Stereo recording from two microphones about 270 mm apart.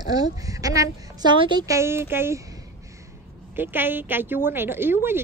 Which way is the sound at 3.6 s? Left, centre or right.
Centre.